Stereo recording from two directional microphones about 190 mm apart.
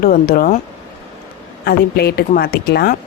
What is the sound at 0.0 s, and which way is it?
Speech, 50° left (ahead or behind).